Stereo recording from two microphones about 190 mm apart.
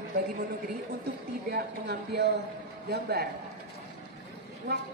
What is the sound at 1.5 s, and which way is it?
Speech, 60° right (ahead or behind).